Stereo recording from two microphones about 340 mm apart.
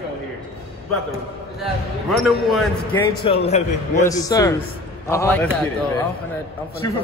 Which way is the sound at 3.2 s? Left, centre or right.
Centre.